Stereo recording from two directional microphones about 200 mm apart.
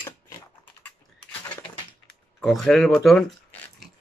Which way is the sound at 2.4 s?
Centre (ahead or behind).